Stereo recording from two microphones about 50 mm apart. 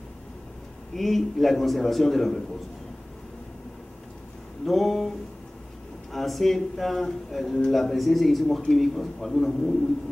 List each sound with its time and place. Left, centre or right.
0.9 s a man's voice: centre
4.6 s a man's voice: centre
6.1 s a man's voice: centre